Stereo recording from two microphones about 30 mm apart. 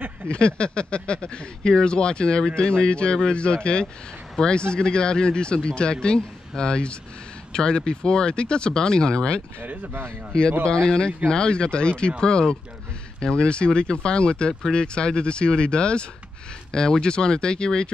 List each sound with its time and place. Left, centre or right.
0.3 s speech: left
10.6 s speech: left
16.7 s speech: left